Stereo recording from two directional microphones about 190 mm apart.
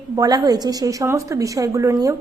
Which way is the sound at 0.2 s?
20° right (ahead or behind).